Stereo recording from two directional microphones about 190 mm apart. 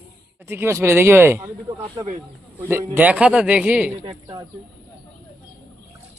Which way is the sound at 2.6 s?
10° right (ahead or behind).